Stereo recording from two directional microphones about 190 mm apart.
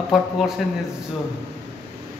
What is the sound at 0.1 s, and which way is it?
Speech, centre (ahead or behind).